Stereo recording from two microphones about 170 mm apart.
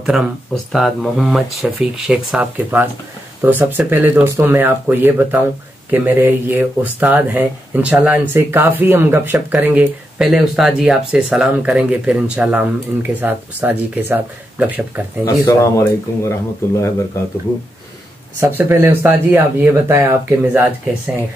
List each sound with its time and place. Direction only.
0.7 s speech: centre (ahead or behind)
15.2 s speech: 20° left (ahead or behind)
18.4 s speech: 15° right (ahead or behind)